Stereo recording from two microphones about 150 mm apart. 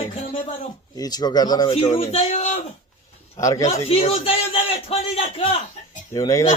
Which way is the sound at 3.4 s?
20° left (ahead or behind).